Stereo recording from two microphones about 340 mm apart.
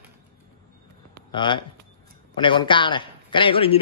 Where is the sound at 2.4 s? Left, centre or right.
Centre.